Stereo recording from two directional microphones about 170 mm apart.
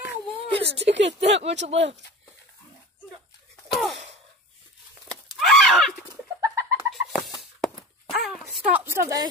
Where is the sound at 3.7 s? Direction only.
Centre (ahead or behind).